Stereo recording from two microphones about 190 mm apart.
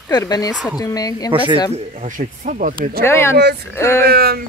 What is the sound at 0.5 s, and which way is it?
Speech, centre (ahead or behind).